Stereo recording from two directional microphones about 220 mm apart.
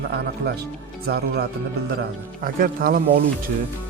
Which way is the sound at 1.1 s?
50° right (ahead or behind).